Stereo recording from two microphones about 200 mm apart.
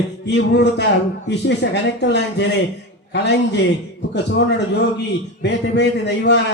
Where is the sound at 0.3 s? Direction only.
60° left (ahead or behind).